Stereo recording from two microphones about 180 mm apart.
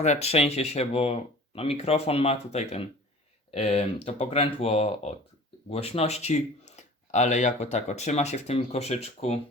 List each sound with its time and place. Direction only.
0.0 s speech: 35° left (ahead or behind)